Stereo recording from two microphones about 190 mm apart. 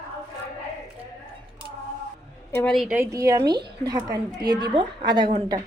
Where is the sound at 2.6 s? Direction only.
Centre (ahead or behind).